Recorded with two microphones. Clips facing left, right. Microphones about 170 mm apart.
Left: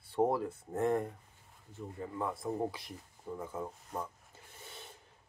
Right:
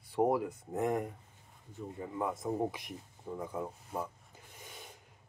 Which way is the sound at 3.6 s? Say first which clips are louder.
Right 2 dB; 10° right (ahead or behind).